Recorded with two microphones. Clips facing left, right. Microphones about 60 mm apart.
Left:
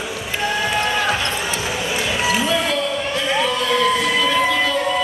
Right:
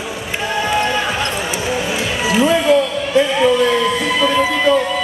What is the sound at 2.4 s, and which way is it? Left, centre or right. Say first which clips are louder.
Basketball bounce: right 7 dB; right.